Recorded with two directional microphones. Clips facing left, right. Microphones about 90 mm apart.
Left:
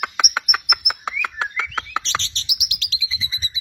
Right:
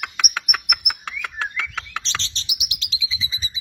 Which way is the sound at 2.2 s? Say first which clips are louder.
Left 1 dB; 25° right (ahead or behind).